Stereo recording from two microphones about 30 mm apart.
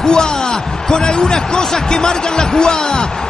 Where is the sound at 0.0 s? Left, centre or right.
Left.